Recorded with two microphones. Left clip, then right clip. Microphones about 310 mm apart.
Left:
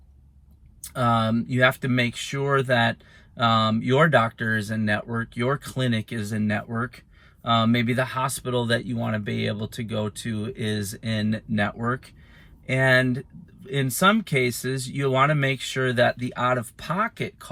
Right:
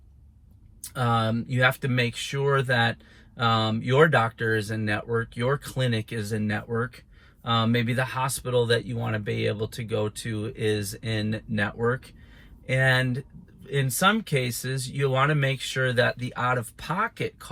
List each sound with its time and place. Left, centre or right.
0.8 s speech: centre